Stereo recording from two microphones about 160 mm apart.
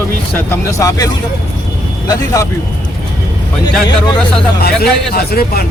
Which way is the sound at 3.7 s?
5° left (ahead or behind).